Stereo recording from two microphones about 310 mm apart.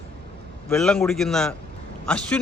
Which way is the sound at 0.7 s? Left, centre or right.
Centre.